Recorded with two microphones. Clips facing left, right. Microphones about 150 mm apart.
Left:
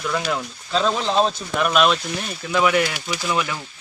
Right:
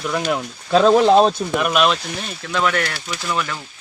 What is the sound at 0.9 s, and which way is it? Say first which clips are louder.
Speech: right 8 dB; 55° right (ahead or behind).